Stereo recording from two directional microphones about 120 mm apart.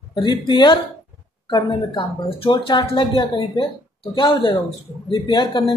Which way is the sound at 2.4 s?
45° left (ahead or behind).